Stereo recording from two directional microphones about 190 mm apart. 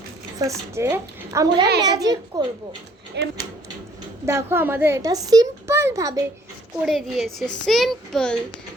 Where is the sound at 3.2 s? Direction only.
70° right (ahead or behind).